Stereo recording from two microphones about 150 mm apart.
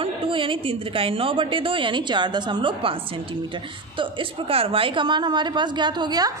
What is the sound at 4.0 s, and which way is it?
A woman's voice, 35° right (ahead or behind).